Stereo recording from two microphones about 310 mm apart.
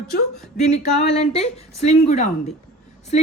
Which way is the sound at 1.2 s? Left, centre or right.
Left.